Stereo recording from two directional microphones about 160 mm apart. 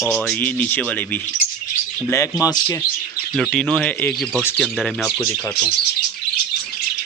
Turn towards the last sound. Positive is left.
turn(degrees=0)  # may be behind; listen again after turning